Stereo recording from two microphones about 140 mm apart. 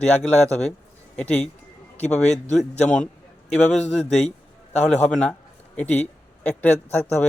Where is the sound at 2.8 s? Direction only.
5° left (ahead or behind).